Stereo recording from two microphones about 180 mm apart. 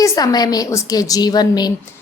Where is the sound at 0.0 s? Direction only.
20° left (ahead or behind).